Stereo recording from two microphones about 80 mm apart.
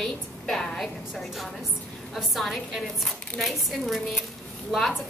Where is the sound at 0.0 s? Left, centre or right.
Centre.